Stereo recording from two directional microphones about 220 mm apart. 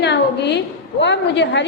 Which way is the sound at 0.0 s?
50° left (ahead or behind).